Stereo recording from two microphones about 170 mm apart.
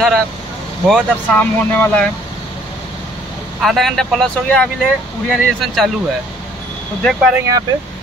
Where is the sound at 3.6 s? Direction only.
Centre (ahead or behind).